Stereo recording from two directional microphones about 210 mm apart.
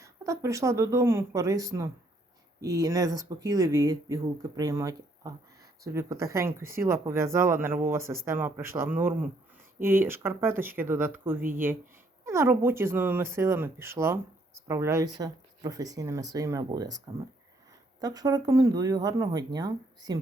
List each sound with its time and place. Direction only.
0.0 s speech: 15° right (ahead or behind)
18.0 s speech: 15° right (ahead or behind)